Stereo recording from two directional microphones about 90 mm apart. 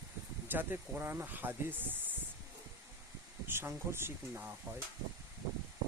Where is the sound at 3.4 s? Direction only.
25° right (ahead or behind).